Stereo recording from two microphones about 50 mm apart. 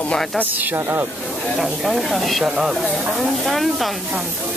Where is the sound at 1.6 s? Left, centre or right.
Centre.